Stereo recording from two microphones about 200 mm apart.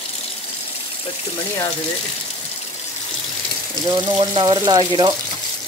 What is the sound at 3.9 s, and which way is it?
Speech, 25° right (ahead or behind).